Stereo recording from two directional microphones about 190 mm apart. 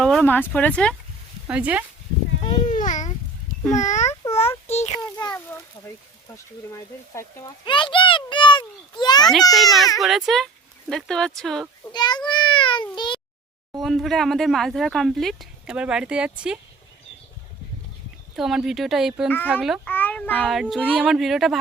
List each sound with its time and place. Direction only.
0.0 s speech: centre (ahead or behind)
1.5 s speech: 5° right (ahead or behind)
2.4 s a sound: 35° left (ahead or behind)
3.7 s a child's voice: 40° left (ahead or behind)
4.9 s a child's voice: 20° left (ahead or behind)
9.5 s speech: centre (ahead or behind)
11.9 s a sound: 20° left (ahead or behind)
13.8 s speech: centre (ahead or behind)
18.3 s speech: centre (ahead or behind)
19.9 s a child's voice: 10° left (ahead or behind)